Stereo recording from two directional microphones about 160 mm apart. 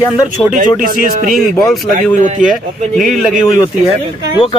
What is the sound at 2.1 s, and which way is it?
Speech, 50° right (ahead or behind).